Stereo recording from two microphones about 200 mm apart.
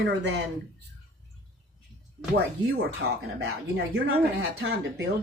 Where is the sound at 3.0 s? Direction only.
55° right (ahead or behind).